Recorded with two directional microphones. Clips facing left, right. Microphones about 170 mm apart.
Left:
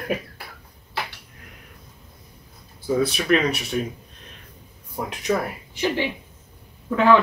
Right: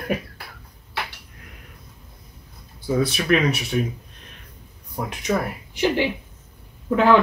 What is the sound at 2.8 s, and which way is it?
Speech, centre (ahead or behind).